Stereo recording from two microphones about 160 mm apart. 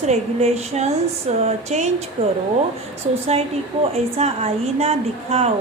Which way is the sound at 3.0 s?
40° right (ahead or behind).